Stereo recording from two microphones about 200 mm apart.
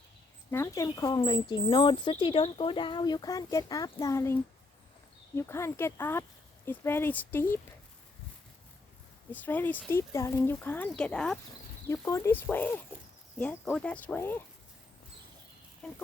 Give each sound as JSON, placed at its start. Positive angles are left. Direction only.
{"t": 0.5, "sound": "speech", "side_deg": 15}
{"t": 9.3, "sound": "speech", "side_deg": 10}
{"t": 11.9, "sound": "speech", "side_deg": 15}